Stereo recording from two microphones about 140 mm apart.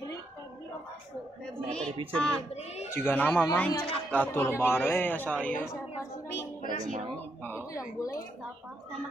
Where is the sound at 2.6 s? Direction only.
50° left (ahead or behind).